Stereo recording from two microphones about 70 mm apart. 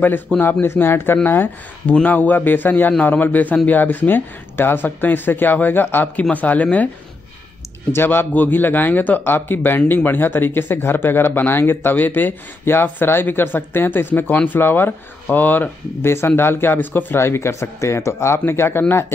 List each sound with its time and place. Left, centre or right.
0.4 s speech: left
7.9 s speech: left